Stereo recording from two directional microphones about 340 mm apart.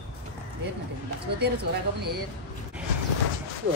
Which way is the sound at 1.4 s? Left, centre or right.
Right.